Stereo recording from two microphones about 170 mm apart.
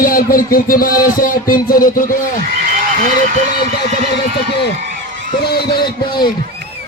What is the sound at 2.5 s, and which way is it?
Frog, 55° right (ahead or behind).